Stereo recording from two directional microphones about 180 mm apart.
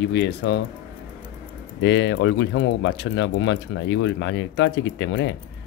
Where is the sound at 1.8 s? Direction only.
90° left.